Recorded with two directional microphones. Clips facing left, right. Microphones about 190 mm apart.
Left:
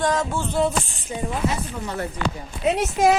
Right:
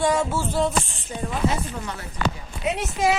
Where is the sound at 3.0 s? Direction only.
45° left (ahead or behind).